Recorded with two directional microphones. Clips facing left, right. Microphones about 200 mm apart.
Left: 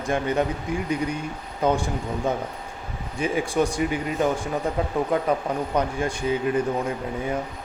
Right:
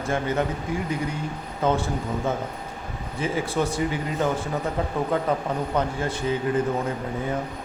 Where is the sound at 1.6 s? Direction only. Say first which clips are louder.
Left 1 dB; 15° left (ahead or behind).